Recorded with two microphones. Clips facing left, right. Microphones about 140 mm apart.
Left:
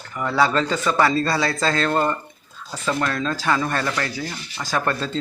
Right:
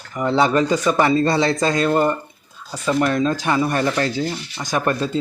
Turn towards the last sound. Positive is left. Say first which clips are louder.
# right 3 dB
turn(degrees=-15)  # may be behind; listen again after turning